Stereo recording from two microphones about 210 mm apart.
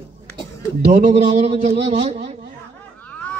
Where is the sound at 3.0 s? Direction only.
5° left (ahead or behind).